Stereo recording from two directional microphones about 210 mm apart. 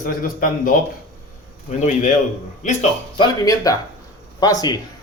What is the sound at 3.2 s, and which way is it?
Speech, 15° left (ahead or behind).